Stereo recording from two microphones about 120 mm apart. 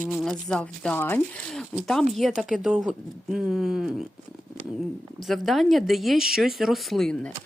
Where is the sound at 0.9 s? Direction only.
20° left (ahead or behind).